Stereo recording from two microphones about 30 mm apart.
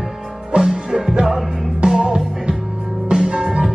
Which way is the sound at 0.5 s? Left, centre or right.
Right.